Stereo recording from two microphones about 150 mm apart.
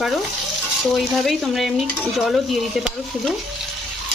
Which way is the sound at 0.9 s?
Centre (ahead or behind).